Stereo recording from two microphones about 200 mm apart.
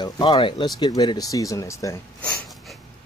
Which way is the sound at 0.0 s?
25° left (ahead or behind).